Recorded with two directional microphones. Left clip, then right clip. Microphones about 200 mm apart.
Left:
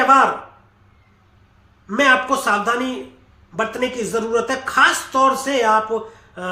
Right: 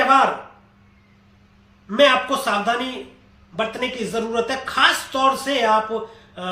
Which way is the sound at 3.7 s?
20° left (ahead or behind).